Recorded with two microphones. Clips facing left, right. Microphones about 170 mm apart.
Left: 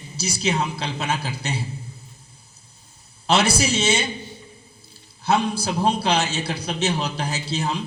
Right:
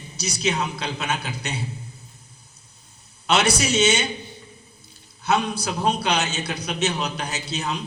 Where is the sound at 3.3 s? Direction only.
30° left (ahead or behind).